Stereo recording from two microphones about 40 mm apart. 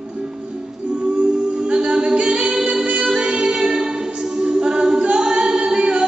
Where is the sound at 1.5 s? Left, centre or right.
Right.